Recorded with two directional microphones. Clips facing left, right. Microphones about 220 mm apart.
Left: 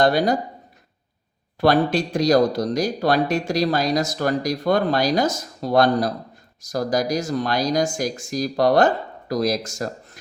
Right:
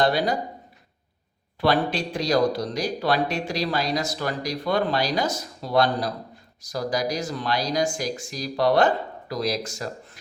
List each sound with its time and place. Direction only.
0.0 s speech: 45° left (ahead or behind)
1.6 s speech: 45° left (ahead or behind)